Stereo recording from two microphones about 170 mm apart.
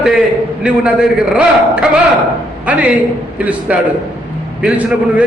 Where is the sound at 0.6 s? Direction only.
5° right (ahead or behind).